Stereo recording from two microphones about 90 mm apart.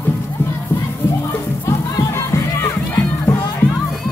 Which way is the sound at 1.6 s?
35° left (ahead or behind).